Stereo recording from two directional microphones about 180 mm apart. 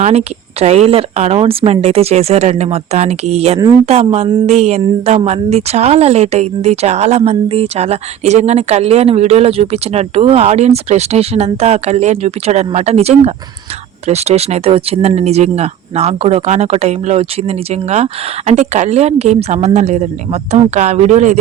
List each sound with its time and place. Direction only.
0.0 s speech: 35° right (ahead or behind)